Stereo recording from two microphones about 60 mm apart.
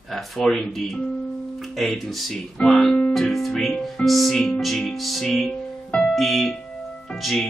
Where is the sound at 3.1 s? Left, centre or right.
Centre.